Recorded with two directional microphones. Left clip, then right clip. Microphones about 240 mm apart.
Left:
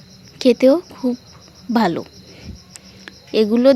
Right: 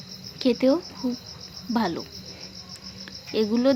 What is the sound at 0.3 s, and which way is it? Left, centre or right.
A woman's voice, left.